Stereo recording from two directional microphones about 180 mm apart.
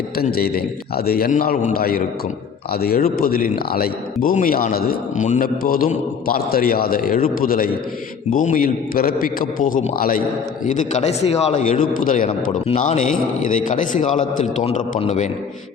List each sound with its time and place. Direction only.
0.2 s a man's voice: 60° left (ahead or behind)
10.7 s a man's voice: 40° left (ahead or behind)